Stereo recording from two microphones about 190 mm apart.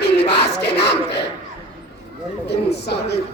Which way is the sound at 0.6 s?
60° left (ahead or behind).